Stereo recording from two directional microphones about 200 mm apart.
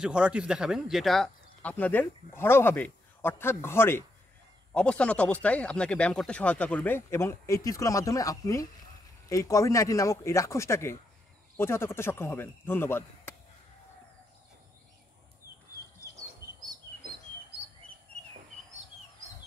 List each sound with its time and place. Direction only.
0.0 s speech: 5° right (ahead or behind); by 13.3 s 10° left (ahead or behind)